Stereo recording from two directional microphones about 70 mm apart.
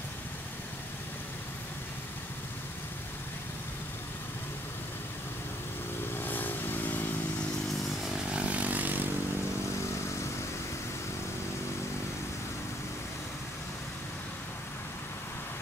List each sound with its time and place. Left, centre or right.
6.1 s vehicle: left
8.3 s vehicle: centre